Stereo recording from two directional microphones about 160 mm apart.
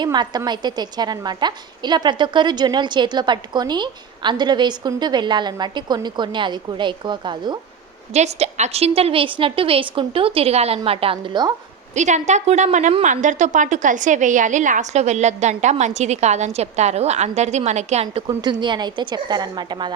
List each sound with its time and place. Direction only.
0.0 s a woman's voice: 25° right (ahead or behind)
8.1 s a woman's voice: 40° right (ahead or behind)
11.9 s a woman's voice: 50° right (ahead or behind)
18.6 s a woman's voice: 30° right (ahead or behind)